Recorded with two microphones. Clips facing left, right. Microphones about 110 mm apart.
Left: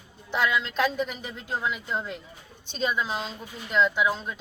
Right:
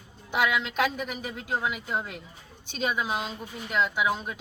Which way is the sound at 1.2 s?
55° right (ahead or behind).